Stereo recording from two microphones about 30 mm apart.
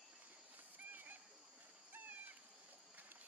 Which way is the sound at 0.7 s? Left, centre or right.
Right.